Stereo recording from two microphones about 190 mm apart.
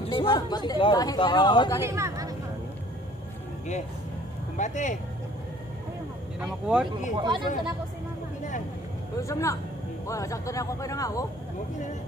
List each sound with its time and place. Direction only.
0.0 s speech: 25° left (ahead or behind)
1.8 s speech: 15° right (ahead or behind)
4.6 s speech: 40° left (ahead or behind)
6.4 s speech: 5° right (ahead or behind)
6.9 s speech: 25° right (ahead or behind)
9.2 s speech: 15° left (ahead or behind)